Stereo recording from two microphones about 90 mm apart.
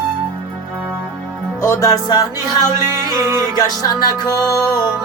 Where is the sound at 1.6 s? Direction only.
35° left (ahead or behind).